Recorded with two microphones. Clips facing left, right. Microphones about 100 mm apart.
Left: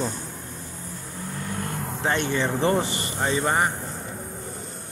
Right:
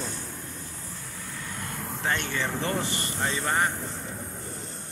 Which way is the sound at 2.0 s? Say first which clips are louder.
Left 5 dB; 20° left (ahead or behind).